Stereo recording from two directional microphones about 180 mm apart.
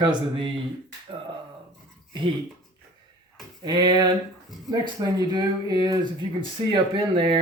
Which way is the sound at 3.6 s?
25° right (ahead or behind).